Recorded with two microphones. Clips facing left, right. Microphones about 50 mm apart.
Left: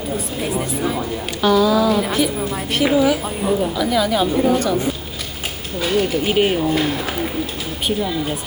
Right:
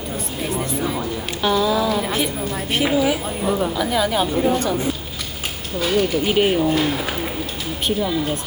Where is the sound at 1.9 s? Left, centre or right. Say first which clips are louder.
Left 3 dB; centre.